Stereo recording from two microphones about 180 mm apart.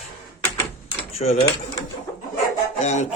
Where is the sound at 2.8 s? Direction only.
40° left (ahead or behind).